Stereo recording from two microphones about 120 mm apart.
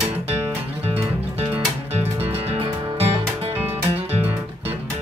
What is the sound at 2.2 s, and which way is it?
Music, 55° right (ahead or behind).